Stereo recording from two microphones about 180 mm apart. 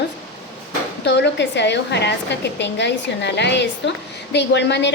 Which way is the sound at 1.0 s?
75° left (ahead or behind).